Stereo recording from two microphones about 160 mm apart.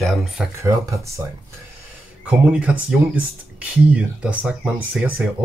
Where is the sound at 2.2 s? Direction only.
10° right (ahead or behind).